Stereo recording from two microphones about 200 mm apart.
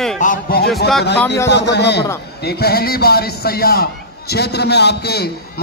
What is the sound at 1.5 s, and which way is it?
A man's voice, 60° left (ahead or behind).